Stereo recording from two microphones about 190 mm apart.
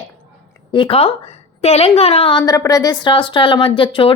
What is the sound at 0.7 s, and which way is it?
A woman's voice, 30° left (ahead or behind).